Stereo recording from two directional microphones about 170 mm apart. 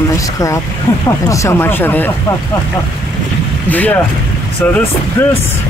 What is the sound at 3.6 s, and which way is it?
Speech, 10° left (ahead or behind).